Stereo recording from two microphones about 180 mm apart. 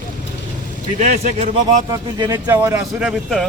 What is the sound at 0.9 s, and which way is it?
Speech, 45° right (ahead or behind).